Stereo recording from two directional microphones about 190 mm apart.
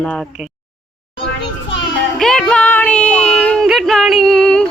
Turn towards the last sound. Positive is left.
turn(degrees=5)  # may be behind; listen again after turning